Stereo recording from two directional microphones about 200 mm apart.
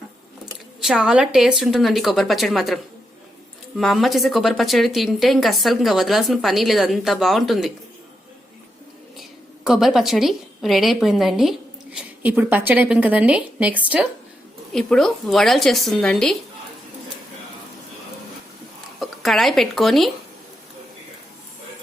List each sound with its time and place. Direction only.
0.8 s speech: centre (ahead or behind)
9.6 s a woman's voice: centre (ahead or behind)
18.9 s speech: centre (ahead or behind)